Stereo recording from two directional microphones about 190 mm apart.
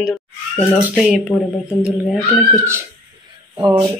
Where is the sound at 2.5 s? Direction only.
15° right (ahead or behind).